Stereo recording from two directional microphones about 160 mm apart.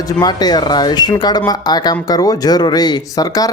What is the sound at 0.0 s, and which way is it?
Speech, 25° left (ahead or behind).